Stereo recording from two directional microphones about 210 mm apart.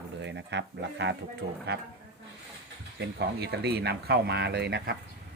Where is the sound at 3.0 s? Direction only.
50° right (ahead or behind).